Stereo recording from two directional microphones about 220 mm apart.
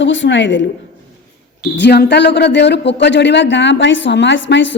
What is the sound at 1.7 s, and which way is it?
Speech, 50° left (ahead or behind).